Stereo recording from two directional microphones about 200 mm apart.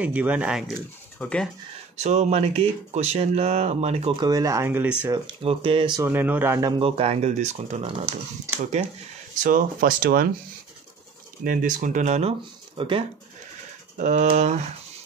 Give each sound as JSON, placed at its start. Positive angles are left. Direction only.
{"t": 0.0, "sound": "speech", "side_deg": -5}
{"t": 2.0, "sound": "speech", "side_deg": -35}
{"t": 4.3, "sound": "speech", "side_deg": -15}
{"t": 5.0, "sound": "speech", "side_deg": -20}
{"t": 6.0, "sound": "speech", "side_deg": -10}
{"t": 6.8, "sound": "speech", "side_deg": -30}
{"t": 9.3, "sound": "speech", "side_deg": -40}
{"t": 11.4, "sound": "speech", "side_deg": -40}
{"t": 13.9, "sound": "speech", "side_deg": -35}